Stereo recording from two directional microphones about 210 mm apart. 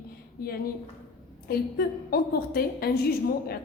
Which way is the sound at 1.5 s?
45° left (ahead or behind).